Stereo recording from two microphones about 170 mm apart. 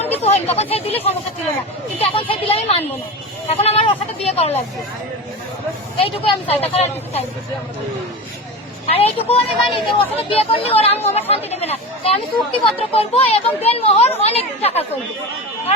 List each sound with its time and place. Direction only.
0.2 s speech: 40° left (ahead or behind)
2.0 s speech: 30° left (ahead or behind)
6.0 s speech: 35° left (ahead or behind)
8.9 s speech: 35° left (ahead or behind)